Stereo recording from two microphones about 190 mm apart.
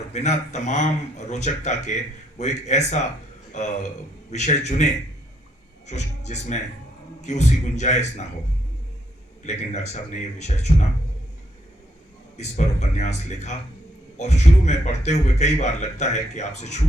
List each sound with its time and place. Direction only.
0.1 s a man's voice: 35° left (ahead or behind)
9.4 s speech: 35° left (ahead or behind)
12.4 s speech: 35° left (ahead or behind)